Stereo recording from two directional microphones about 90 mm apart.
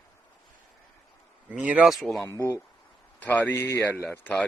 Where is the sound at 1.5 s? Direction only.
15° right (ahead or behind).